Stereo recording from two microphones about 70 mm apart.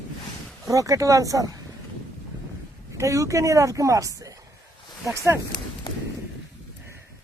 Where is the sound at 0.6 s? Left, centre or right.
Right.